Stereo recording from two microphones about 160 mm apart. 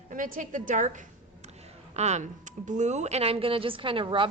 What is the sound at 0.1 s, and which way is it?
A woman's voice, 55° right (ahead or behind).